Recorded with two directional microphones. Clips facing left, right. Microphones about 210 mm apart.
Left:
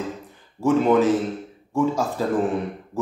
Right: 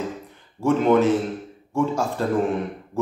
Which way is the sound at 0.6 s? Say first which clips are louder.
Even; 5° left (ahead or behind).